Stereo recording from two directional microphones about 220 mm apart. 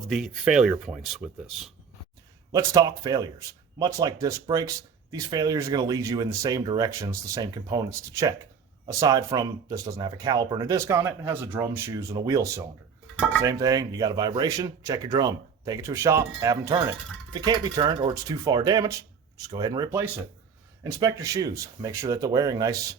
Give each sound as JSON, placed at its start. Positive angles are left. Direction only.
{"t": 0.1, "sound": "speech", "side_deg": 0}
{"t": 2.5, "sound": "speech", "side_deg": -15}